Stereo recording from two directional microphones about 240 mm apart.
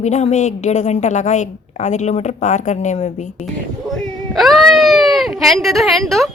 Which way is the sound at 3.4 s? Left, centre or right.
Centre.